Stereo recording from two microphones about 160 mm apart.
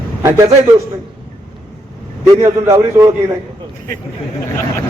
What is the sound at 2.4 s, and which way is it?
Speech, 20° right (ahead or behind).